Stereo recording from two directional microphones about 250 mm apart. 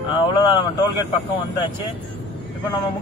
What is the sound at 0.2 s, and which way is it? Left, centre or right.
Speech, centre.